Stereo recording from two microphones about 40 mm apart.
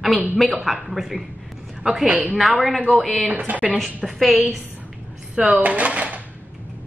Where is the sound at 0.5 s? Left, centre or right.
Centre.